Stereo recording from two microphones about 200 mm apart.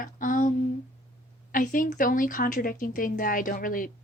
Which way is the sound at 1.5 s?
40° left (ahead or behind).